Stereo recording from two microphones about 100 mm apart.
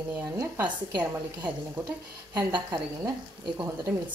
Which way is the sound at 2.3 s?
45° right (ahead or behind).